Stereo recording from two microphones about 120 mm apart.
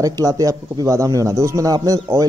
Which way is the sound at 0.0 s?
30° right (ahead or behind).